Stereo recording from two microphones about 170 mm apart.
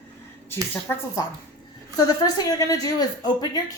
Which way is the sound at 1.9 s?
25° left (ahead or behind).